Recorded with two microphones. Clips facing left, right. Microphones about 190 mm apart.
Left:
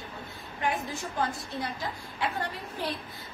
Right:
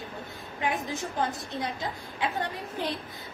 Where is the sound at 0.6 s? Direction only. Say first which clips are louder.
Right 1 dB; 20° right (ahead or behind).